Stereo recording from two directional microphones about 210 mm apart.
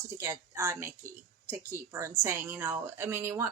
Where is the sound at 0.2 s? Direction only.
15° right (ahead or behind).